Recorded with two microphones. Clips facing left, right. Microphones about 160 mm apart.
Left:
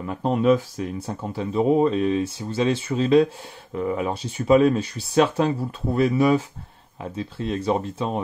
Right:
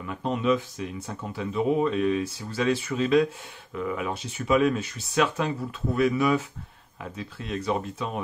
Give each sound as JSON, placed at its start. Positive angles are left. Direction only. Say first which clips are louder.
{"t": 0.0, "sound": "speech", "louder": "left 6 dB", "side_deg": 40}